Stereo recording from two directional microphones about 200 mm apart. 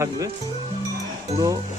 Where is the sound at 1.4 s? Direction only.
20° right (ahead or behind).